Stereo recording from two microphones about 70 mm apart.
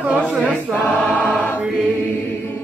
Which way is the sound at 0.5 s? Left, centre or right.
Left.